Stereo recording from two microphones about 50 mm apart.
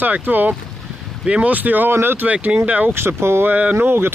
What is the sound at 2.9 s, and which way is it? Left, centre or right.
Speech, right.